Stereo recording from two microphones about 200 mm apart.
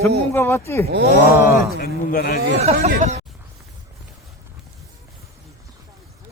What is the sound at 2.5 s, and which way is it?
Speech, 30° right (ahead or behind).